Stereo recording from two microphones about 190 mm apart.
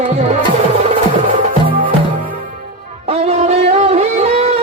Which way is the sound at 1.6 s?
25° right (ahead or behind).